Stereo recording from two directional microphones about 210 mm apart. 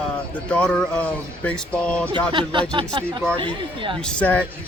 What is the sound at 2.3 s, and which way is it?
Speech, 20° right (ahead or behind).